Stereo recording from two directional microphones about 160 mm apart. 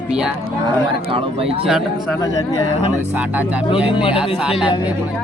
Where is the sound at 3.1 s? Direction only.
10° right (ahead or behind).